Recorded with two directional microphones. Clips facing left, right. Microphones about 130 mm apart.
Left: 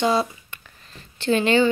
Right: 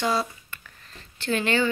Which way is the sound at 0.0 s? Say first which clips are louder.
Left 5 dB; 20° left (ahead or behind).